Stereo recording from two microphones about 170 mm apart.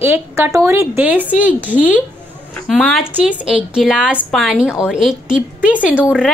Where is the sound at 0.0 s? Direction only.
15° right (ahead or behind).